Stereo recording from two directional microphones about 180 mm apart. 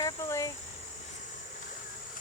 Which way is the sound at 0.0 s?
15° left (ahead or behind).